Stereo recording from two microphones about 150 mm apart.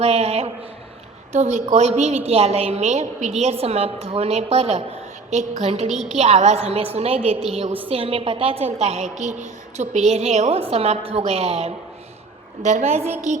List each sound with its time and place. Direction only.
0.0 s a woman's voice: 45° right (ahead or behind)
5.9 s a woman's voice: centre (ahead or behind)
6.1 s a woman's voice: 45° right (ahead or behind)